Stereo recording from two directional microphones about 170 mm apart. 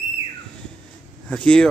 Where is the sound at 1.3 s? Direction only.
5° left (ahead or behind).